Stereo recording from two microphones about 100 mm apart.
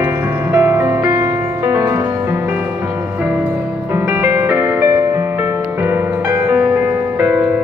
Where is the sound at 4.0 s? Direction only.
20° right (ahead or behind).